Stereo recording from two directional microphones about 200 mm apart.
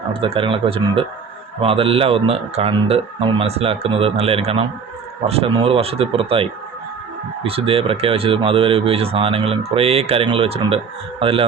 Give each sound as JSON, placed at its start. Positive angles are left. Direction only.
{"t": 0.1, "sound": "speech", "side_deg": -25}